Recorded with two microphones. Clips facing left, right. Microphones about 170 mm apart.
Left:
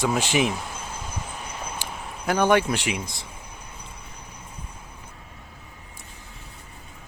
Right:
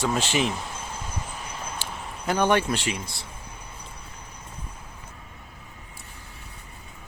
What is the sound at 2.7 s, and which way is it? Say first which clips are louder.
Speech: left 1 dB; 15° left (ahead or behind).